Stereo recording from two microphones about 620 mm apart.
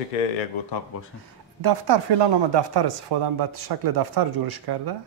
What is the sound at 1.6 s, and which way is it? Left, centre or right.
Speech, right.